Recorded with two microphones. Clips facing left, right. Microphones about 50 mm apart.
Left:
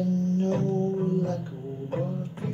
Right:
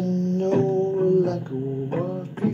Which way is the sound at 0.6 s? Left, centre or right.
Right.